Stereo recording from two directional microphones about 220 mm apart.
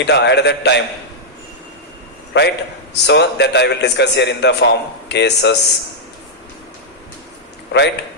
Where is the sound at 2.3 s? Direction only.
50° left (ahead or behind).